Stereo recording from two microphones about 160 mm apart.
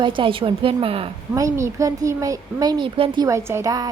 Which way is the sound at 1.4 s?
20° right (ahead or behind).